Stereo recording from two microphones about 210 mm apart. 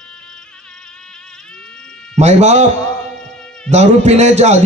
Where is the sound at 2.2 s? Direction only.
30° right (ahead or behind).